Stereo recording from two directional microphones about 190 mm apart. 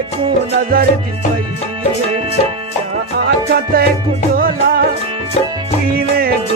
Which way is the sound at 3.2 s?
55° right (ahead or behind).